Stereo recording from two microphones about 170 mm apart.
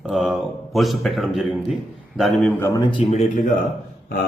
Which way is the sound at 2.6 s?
15° left (ahead or behind).